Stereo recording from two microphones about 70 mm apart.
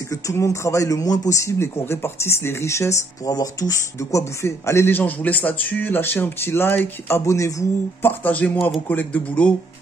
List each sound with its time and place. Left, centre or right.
0.1 s speech: left
1.4 s speech: left
3.3 s speech: left
4.2 s speech: left
7.1 s speech: left
8.0 s speech: left